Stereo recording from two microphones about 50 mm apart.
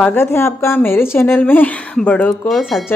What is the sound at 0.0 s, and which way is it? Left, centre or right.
A woman's voice, left.